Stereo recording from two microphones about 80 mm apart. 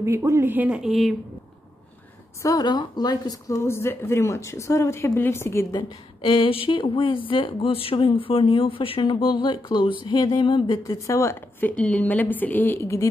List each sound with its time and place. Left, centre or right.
0.0 s speech: right
0.7 s a woman's voice: centre
2.4 s a woman's voice: left
2.7 s speech: left
3.6 s speech: left
5.8 s speech: left
10.0 s music: left
10.8 s speech: left
11.6 s a woman's voice: centre